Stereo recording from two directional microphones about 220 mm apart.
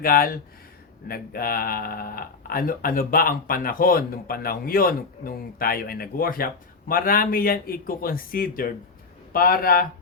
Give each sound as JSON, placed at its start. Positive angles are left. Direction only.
{"t": 0.0, "sound": "speech", "side_deg": 40}